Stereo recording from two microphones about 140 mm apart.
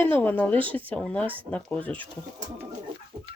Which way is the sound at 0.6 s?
40° right (ahead or behind).